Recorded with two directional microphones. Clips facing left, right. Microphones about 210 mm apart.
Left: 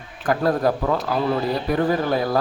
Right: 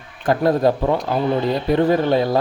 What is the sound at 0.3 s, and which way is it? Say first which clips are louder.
Speech: right 3 dB; 25° right (ahead or behind).